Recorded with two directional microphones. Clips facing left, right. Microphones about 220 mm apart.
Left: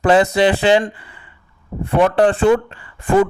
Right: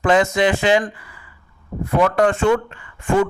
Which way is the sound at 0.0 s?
35° left (ahead or behind).